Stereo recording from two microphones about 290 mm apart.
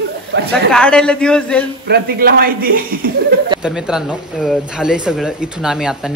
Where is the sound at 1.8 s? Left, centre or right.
Right.